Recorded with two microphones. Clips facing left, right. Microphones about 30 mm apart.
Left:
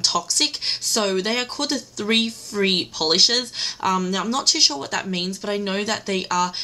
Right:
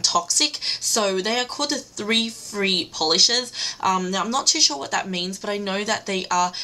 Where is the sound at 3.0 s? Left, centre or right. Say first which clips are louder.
Even; left.